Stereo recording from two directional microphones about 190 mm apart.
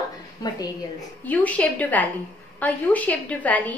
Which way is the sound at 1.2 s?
10° left (ahead or behind).